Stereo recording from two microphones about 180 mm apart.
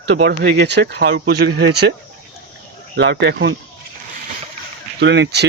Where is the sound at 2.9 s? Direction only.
85° right.